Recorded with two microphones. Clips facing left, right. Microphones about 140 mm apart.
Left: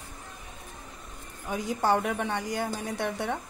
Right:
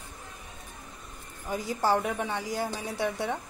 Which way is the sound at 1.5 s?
Centre (ahead or behind).